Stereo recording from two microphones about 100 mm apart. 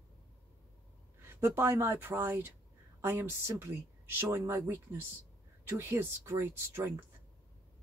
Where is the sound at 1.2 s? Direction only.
25° right (ahead or behind).